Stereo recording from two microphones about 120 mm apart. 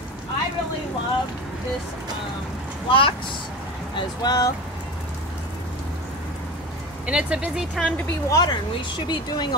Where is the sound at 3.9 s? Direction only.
35° left (ahead or behind).